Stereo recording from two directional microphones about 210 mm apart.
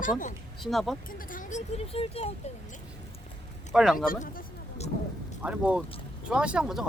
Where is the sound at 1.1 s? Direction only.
40° left (ahead or behind).